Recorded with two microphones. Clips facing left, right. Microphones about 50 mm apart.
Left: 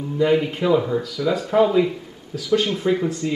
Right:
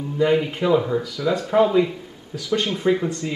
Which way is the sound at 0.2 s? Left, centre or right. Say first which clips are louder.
Left 1 dB; centre.